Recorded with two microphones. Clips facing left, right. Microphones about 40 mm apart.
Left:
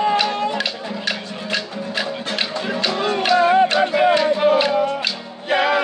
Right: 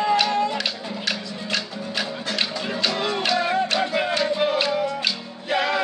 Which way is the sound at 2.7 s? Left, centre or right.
Centre.